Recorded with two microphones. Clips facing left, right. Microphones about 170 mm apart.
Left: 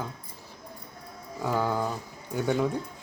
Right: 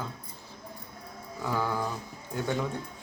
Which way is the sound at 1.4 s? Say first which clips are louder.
Left 3 dB; 15° left (ahead or behind).